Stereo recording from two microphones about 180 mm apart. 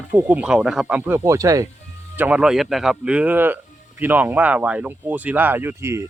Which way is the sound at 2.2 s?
5° right (ahead or behind).